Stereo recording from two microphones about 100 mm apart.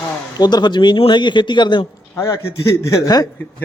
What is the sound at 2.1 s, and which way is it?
A man's voice, 30° left (ahead or behind).